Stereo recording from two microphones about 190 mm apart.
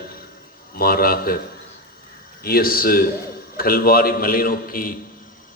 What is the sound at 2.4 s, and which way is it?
A man's voice, 50° left (ahead or behind).